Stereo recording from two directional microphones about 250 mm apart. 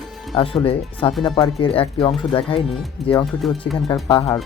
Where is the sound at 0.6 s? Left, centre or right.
Left.